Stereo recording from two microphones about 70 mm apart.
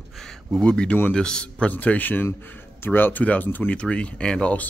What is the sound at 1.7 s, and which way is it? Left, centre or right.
Speech, left.